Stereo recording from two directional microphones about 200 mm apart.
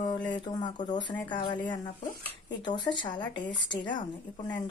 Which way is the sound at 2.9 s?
20° left (ahead or behind).